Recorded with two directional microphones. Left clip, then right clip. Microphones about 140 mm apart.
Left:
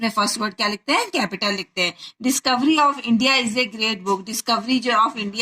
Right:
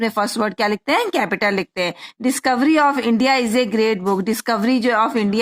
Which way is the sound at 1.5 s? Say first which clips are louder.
Right 2 dB; 60° right (ahead or behind).